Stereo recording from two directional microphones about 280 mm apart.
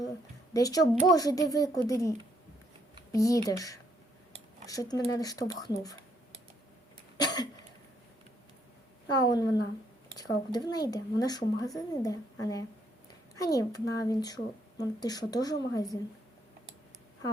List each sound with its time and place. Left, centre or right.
0.5 s speech: centre
7.2 s cough: centre
9.0 s speech: centre
10.7 s speech: centre